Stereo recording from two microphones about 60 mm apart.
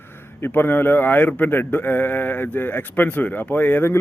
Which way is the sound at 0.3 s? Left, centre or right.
Left.